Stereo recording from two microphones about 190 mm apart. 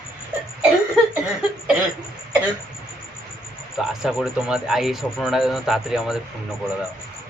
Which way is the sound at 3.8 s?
Centre (ahead or behind).